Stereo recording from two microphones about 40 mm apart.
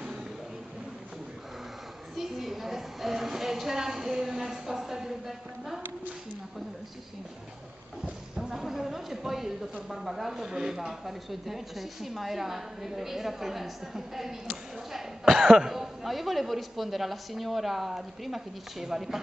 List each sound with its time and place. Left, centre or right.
2.1 s speech: centre
8.0 s a woman's voice: centre